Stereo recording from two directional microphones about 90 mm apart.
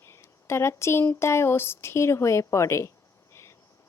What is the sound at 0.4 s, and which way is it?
A woman's voice, 30° left (ahead or behind).